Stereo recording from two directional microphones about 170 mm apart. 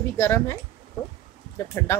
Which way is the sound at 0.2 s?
15° left (ahead or behind).